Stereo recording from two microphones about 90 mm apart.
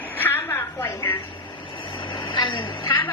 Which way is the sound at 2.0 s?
65° left (ahead or behind).